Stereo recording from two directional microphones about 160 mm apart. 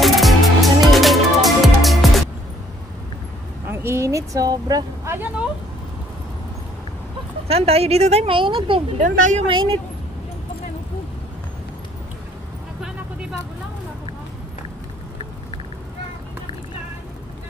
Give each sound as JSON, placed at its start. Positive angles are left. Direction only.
{"t": 0.0, "sound": "music", "side_deg": 0}
{"t": 3.6, "sound": "vehicle", "side_deg": -15}
{"t": 7.4, "sound": "speech", "side_deg": -40}
{"t": 9.0, "sound": "speech", "side_deg": -50}
{"t": 9.5, "sound": "speech", "side_deg": -30}